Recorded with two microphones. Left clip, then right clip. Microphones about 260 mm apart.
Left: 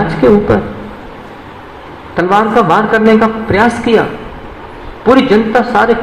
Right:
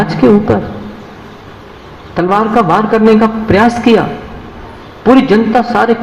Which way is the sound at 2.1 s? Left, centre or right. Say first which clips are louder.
Left 1 dB; right.